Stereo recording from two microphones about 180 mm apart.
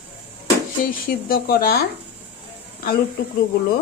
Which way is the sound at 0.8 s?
55° left (ahead or behind).